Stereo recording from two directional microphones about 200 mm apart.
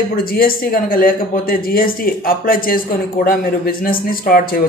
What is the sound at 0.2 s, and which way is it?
A man's voice, 45° left (ahead or behind).